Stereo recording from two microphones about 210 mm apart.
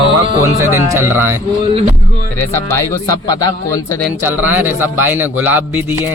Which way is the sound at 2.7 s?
15° left (ahead or behind).